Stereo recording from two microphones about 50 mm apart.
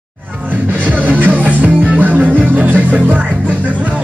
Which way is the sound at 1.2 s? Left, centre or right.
Right.